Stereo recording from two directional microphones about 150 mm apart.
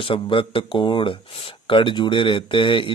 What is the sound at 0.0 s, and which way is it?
Speech, 35° left (ahead or behind).